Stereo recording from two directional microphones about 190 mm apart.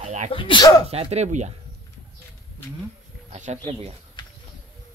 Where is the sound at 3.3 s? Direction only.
35° right (ahead or behind).